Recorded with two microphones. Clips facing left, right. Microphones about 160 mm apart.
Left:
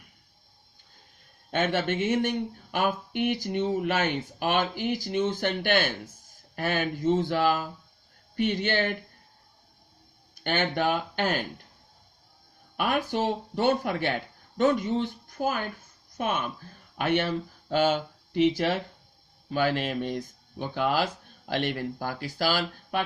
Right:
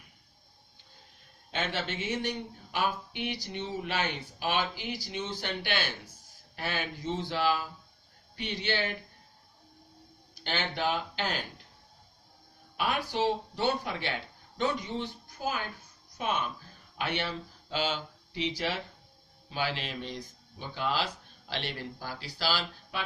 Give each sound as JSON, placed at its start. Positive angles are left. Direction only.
{"t": 1.5, "sound": "speech", "side_deg": 50}
{"t": 10.4, "sound": "speech", "side_deg": 50}
{"t": 12.7, "sound": "speech", "side_deg": 50}